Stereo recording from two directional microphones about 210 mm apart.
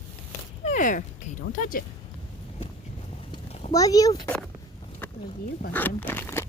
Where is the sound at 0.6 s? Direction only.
35° left (ahead or behind).